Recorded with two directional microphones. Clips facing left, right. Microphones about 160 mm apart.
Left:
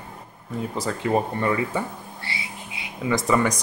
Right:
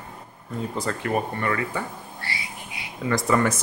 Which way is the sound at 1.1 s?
20° left (ahead or behind).